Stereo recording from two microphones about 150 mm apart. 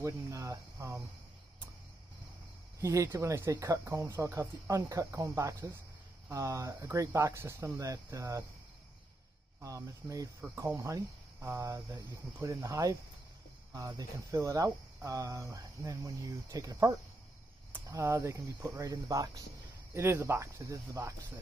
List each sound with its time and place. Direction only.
0.0 s speech: 20° right (ahead or behind)
2.8 s speech: 20° right (ahead or behind)
9.6 s speech: 20° right (ahead or behind)